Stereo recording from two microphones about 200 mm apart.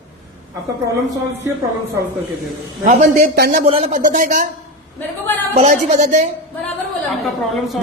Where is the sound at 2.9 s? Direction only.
40° right (ahead or behind).